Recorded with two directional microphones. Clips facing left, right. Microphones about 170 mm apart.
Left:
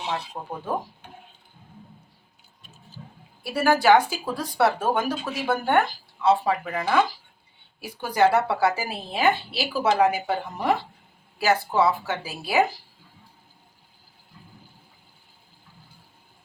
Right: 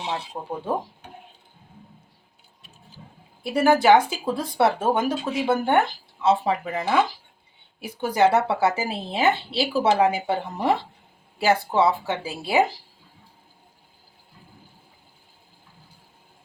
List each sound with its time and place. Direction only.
0.4 s speech: 10° right (ahead or behind)
3.4 s speech: 20° right (ahead or behind)